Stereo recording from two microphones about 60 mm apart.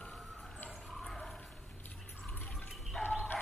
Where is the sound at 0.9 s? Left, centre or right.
Centre.